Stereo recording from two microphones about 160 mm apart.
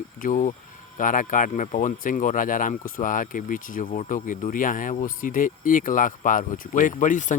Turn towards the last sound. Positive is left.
turn(degrees=50)  # may be behind; listen again after turning